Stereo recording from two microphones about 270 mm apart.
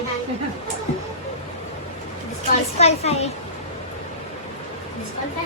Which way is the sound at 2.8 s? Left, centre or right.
Left.